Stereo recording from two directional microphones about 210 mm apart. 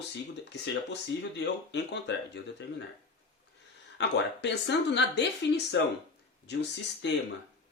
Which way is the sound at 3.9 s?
55° left (ahead or behind).